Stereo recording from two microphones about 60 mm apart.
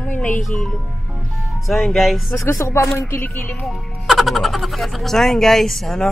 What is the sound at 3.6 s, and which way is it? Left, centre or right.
Speech, centre.